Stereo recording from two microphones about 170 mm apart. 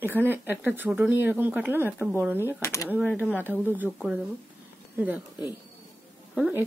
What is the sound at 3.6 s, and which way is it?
Speech, 10° right (ahead or behind).